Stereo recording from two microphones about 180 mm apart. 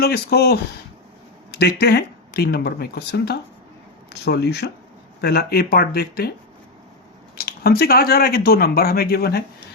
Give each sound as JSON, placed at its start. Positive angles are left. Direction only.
{"t": 0.0, "sound": "speech", "side_deg": 60}
{"t": 7.3, "sound": "speech", "side_deg": 60}